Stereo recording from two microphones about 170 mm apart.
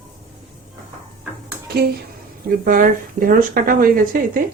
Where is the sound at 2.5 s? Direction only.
50° right (ahead or behind).